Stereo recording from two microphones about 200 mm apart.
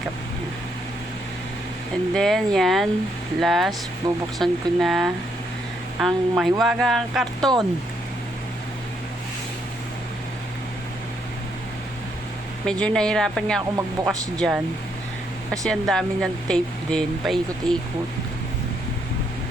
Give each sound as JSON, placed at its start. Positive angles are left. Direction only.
{"t": 2.1, "sound": "speech", "side_deg": 0}
{"t": 4.0, "sound": "speech", "side_deg": -20}
{"t": 4.4, "sound": "speech", "side_deg": 0}
{"t": 12.6, "sound": "speech", "side_deg": 5}
{"t": 13.7, "sound": "speech", "side_deg": -15}
{"t": 14.3, "sound": "speech", "side_deg": 0}
{"t": 15.6, "sound": "speech", "side_deg": 0}